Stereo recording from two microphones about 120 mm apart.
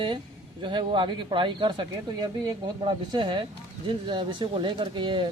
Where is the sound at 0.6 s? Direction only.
40° right (ahead or behind).